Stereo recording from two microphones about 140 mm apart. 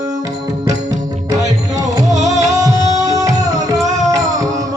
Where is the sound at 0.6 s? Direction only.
25° right (ahead or behind).